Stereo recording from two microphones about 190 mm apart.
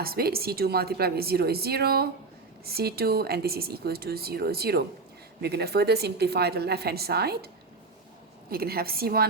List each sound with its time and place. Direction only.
0.0 s a woman's voice: 55° right (ahead or behind)